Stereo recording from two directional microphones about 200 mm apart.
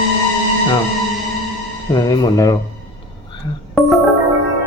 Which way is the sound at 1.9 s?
20° left (ahead or behind).